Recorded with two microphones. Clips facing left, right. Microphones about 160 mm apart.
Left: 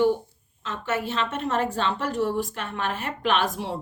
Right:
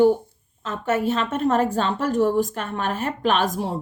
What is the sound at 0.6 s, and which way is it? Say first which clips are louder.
A woman's voice: right 6 dB; 45° right (ahead or behind).